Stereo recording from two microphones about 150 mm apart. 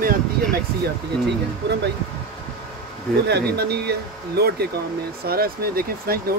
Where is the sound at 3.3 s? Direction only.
90° right.